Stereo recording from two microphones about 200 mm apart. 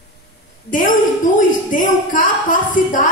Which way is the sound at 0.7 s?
40° left (ahead or behind).